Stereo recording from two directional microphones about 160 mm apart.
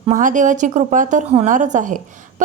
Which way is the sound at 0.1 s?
55° right (ahead or behind).